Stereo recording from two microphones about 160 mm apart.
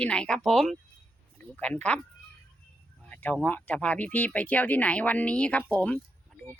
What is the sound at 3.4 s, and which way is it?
Speech, 10° left (ahead or behind).